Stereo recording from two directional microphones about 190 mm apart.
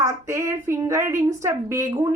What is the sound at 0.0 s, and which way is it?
A woman's voice, 15° right (ahead or behind).